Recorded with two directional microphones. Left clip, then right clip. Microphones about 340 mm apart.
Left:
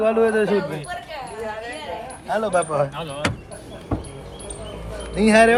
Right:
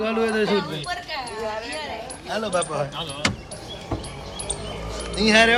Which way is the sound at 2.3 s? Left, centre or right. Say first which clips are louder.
Left 4 dB; centre.